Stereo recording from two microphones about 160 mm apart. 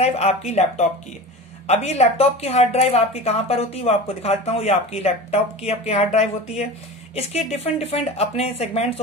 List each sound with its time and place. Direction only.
0.0 s speech: 40° left (ahead or behind)